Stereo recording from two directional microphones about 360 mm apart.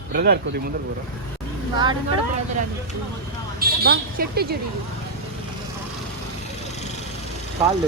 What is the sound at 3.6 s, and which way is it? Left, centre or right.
A woman's voice, right.